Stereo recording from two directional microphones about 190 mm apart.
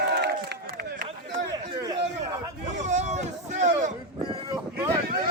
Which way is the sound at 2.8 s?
40° right (ahead or behind).